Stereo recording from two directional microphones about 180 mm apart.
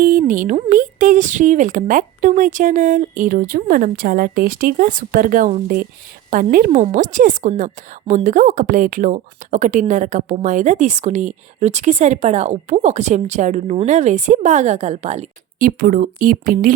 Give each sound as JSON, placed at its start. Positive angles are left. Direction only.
{"t": 0.0, "sound": "a woman's voice", "side_deg": -45}
{"t": 15.6, "sound": "speech", "side_deg": -50}